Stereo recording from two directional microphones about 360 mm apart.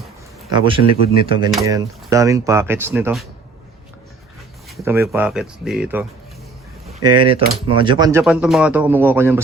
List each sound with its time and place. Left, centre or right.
0.8 s speech: left
1.5 s speech: centre
4.8 s speech: centre
6.8 s speech: centre